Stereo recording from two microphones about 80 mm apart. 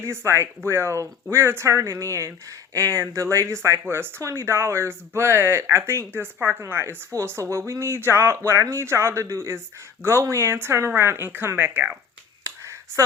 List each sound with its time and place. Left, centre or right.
0.0 s speech: right